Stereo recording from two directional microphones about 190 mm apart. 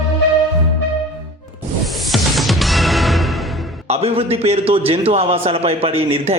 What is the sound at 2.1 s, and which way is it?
Music, centre (ahead or behind).